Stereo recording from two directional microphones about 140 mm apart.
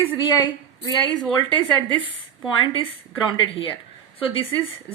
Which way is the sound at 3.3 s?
35° left (ahead or behind).